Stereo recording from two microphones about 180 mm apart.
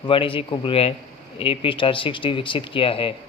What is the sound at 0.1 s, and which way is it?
A man's voice, 30° left (ahead or behind).